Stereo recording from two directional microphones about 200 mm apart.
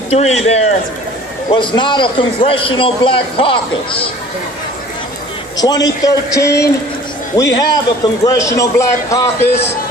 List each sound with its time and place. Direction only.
0.1 s a man's voice: 30° left (ahead or behind)
5.5 s a man's voice: 20° left (ahead or behind)